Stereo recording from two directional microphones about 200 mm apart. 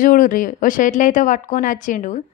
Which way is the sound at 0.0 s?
45° left (ahead or behind).